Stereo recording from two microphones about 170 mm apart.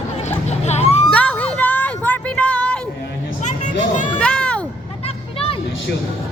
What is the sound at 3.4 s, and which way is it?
Hubbub, 45° left (ahead or behind).